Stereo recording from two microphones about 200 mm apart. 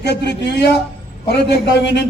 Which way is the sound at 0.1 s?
55° left (ahead or behind).